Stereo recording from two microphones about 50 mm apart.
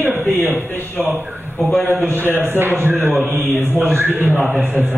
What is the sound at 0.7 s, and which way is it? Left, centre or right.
Speech, left.